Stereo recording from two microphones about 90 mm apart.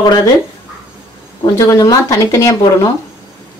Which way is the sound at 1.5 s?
40° left (ahead or behind).